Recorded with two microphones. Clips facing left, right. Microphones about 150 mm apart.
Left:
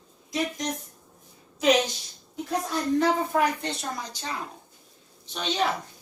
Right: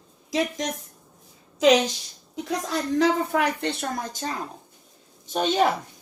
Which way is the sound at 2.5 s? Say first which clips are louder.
Even; 90° right.